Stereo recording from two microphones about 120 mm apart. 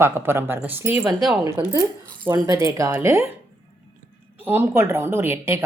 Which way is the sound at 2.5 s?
25° right (ahead or behind).